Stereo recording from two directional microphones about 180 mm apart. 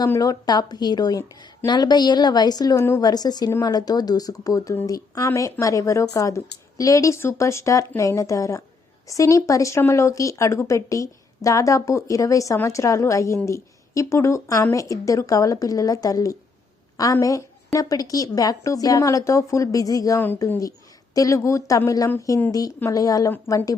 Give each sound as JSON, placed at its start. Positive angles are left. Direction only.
{"t": 0.0, "sound": "a woman's voice", "side_deg": 20}